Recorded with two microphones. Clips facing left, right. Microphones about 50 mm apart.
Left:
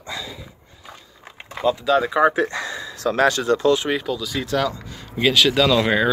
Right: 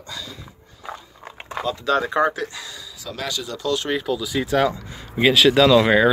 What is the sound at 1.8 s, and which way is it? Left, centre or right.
Speech, centre.